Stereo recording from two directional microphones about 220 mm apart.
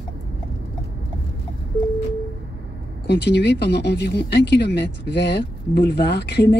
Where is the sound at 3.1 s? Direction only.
50° left (ahead or behind).